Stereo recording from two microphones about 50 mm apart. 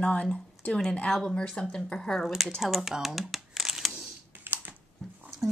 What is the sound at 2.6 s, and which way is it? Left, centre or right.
Crumpling, centre.